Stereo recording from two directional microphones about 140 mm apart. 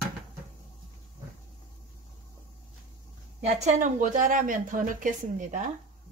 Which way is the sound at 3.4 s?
65° right (ahead or behind).